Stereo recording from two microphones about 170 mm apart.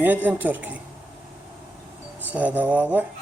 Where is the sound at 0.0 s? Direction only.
10° right (ahead or behind).